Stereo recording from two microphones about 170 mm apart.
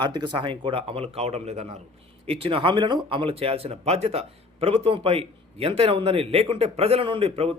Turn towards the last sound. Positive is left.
turn(degrees=-35)  # may be behind; listen again after turning